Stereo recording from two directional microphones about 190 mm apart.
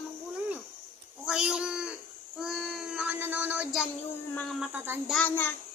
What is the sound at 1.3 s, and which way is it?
Speech, 5° right (ahead or behind).